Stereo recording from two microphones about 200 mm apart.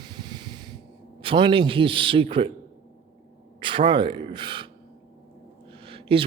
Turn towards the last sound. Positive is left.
turn(degrees=-25)  # may be behind; listen again after turning